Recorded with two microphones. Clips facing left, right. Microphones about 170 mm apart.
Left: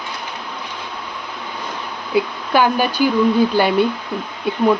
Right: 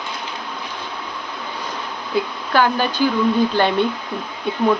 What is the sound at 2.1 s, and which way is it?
Speech, 10° left (ahead or behind).